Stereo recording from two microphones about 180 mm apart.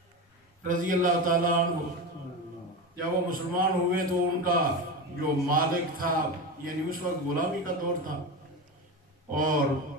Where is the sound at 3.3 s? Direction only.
50° right (ahead or behind).